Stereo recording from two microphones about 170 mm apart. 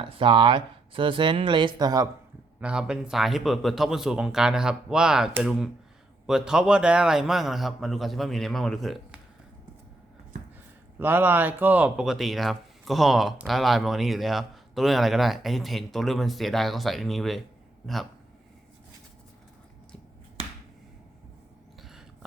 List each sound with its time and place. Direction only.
0.0 s speech: 30° right (ahead or behind)
2.6 s speech: 5° right (ahead or behind)
10.9 s speech: 10° right (ahead or behind)